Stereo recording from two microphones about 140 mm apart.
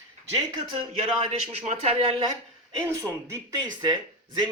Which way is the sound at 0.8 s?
45° right (ahead or behind).